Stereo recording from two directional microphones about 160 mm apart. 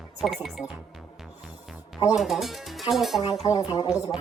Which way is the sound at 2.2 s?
Centre (ahead or behind).